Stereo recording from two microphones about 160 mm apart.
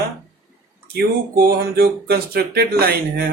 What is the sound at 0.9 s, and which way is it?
Speech, 80° right.